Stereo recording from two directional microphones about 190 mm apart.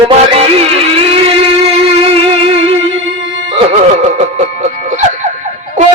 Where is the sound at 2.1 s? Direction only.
30° right (ahead or behind).